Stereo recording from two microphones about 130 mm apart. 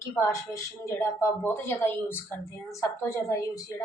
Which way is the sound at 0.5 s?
20° left (ahead or behind).